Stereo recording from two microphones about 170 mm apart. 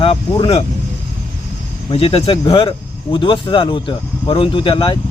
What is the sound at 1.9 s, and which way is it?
Speech, 35° left (ahead or behind).